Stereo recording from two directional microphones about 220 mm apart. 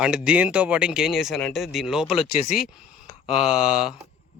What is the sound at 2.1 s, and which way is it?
Speech, 25° left (ahead or behind).